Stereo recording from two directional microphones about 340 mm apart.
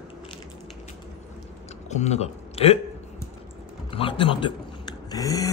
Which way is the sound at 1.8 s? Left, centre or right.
Centre.